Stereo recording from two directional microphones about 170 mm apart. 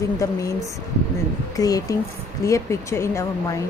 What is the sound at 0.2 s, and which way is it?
Speech, 20° left (ahead or behind).